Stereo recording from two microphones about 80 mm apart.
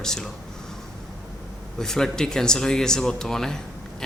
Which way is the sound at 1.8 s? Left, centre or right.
Centre.